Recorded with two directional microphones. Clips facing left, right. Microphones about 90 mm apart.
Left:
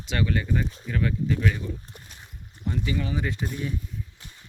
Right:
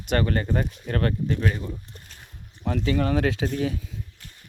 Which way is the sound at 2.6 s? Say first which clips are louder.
Right 5 dB; 80° right.